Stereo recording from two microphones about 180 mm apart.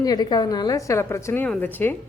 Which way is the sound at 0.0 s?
20° left (ahead or behind).